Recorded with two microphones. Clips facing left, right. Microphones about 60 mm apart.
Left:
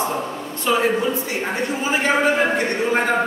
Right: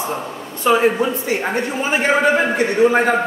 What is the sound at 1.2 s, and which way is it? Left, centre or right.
Speech, right.